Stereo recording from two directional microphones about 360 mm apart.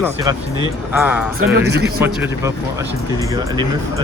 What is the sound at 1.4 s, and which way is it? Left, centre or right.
Speech, right.